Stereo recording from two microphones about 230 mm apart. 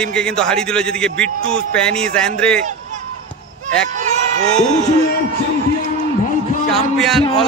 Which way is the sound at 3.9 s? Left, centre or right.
Right.